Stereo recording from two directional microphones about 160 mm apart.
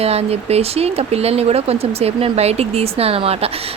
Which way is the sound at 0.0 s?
40° right (ahead or behind).